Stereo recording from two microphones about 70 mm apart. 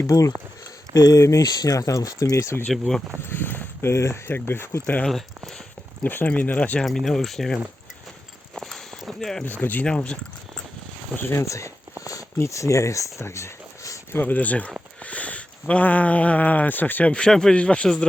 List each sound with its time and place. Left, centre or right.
0.1 s speech: left
3.2 s a sound: left
4.3 s speech: left
5.0 s speech: centre
6.0 s speech: left
6.8 s speech: centre
8.5 s walk: centre
9.4 s speech: left
9.8 s speech: centre
11.2 s speech: left
14.1 s speech: left